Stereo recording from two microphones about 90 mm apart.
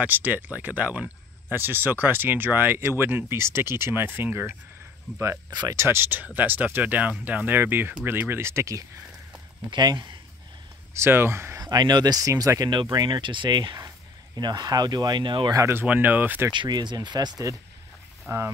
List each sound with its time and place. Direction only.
0.0 s speech: 20° right (ahead or behind)
5.1 s speech: 10° right (ahead or behind)
5.5 s speech: 50° right (ahead or behind)
5.8 s speech: 25° right (ahead or behind)
9.7 s speech: 60° right (ahead or behind)
11.0 s speech: 25° right (ahead or behind)
11.6 s speech: 50° right (ahead or behind)
13.7 s a sound: 35° right (ahead or behind)
14.4 s speech: 45° right (ahead or behind)
15.5 s speech: 35° right (ahead or behind)
15.8 s speech: 20° right (ahead or behind)
16.5 s speech: 55° right (ahead or behind)
18.3 s speech: 25° right (ahead or behind)